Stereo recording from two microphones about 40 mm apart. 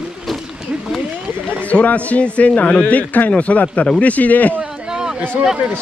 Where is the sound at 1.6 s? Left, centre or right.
Left.